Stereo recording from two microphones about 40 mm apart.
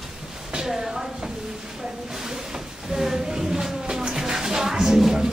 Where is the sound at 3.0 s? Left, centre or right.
Centre.